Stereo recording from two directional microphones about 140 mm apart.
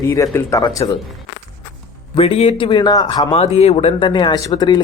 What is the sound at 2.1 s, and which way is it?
A man's voice, 45° left (ahead or behind).